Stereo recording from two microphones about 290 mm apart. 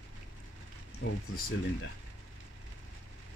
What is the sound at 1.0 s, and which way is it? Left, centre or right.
Speech, left.